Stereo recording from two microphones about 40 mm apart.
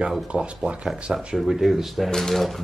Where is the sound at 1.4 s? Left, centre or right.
Centre.